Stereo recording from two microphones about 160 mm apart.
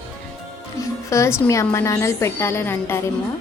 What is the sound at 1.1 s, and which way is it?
A woman's voice, 20° left (ahead or behind).